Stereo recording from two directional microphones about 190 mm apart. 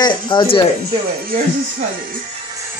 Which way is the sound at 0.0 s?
25° left (ahead or behind).